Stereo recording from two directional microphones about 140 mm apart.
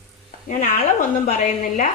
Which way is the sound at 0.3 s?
65° left (ahead or behind).